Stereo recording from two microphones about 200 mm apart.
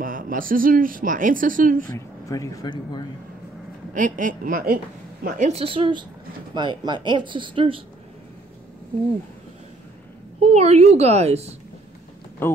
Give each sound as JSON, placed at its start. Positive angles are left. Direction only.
{"t": 0.0, "sound": "speech", "side_deg": -45}
{"t": 1.9, "sound": "speech", "side_deg": 15}
{"t": 3.9, "sound": "a woman's voice", "side_deg": -40}
{"t": 5.2, "sound": "speech", "side_deg": -35}
{"t": 10.4, "sound": "a woman's voice", "side_deg": -30}